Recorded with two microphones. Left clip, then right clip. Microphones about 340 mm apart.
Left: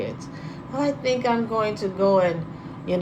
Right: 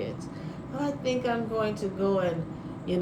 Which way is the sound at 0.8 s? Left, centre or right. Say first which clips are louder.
Left 6 dB; centre.